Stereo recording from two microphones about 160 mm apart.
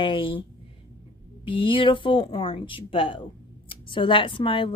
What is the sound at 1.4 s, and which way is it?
A woman's voice, 30° left (ahead or behind).